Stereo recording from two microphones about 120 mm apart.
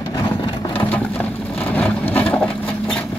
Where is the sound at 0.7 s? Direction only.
15° left (ahead or behind).